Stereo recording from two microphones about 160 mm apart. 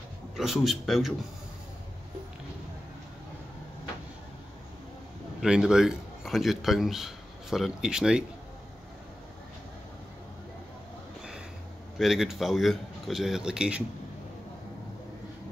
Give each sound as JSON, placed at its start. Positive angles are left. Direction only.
{"t": 0.4, "sound": "speech", "side_deg": 0}
{"t": 5.4, "sound": "a man's voice", "side_deg": -5}
{"t": 12.0, "sound": "speech", "side_deg": 0}